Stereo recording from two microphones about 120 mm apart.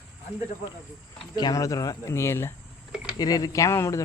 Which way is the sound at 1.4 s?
30° left (ahead or behind).